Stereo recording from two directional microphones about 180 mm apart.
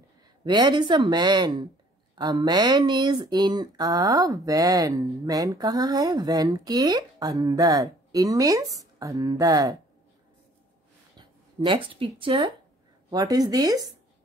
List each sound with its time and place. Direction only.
0.5 s speech: 25° right (ahead or behind)
11.1 s speech: 25° right (ahead or behind)